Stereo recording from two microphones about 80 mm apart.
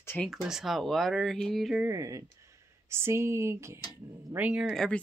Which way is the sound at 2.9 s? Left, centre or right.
Right.